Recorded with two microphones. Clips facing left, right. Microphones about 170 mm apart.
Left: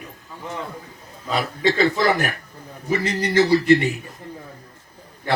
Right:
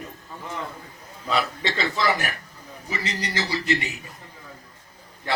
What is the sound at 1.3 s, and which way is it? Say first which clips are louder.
Speech: left 4 dB; 45° left (ahead or behind).